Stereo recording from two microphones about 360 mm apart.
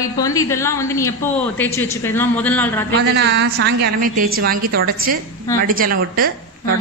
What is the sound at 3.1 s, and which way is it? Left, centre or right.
Speech, right.